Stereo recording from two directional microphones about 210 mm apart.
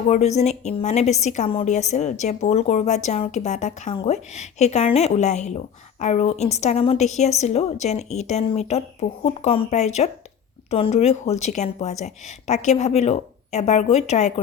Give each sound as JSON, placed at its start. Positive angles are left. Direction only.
{"t": 0.1, "sound": "a woman's voice", "side_deg": 30}